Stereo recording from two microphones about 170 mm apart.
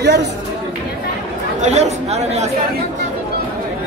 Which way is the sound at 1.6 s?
40° right (ahead or behind).